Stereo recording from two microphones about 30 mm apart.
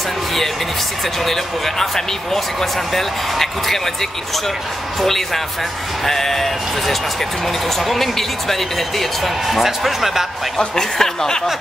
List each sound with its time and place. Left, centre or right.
1.2 s speech: centre
9.5 s speech: centre
10.8 s speech: centre